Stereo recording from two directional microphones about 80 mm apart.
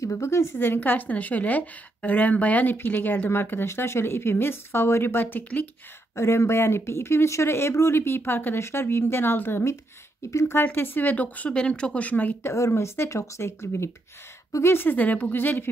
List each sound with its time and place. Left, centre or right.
0.0 s a woman's voice: left
6.1 s a woman's voice: left
12.5 s a woman's voice: left